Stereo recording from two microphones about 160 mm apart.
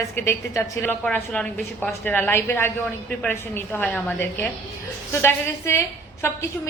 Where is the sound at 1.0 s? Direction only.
5° left (ahead or behind).